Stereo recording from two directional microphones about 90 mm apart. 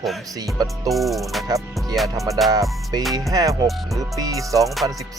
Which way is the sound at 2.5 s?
45° right (ahead or behind).